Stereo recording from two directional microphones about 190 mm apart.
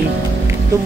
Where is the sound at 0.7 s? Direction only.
15° right (ahead or behind).